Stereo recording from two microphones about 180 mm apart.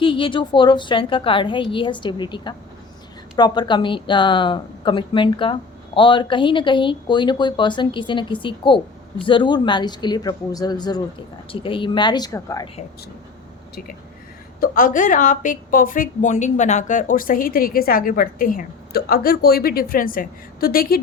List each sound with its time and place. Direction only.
0.0 s a woman's voice: 30° left (ahead or behind)
14.6 s a woman's voice: 45° left (ahead or behind)